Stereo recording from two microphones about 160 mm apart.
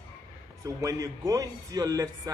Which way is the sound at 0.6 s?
20° right (ahead or behind).